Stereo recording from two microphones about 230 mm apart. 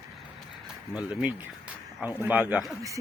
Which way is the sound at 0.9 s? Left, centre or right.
Centre.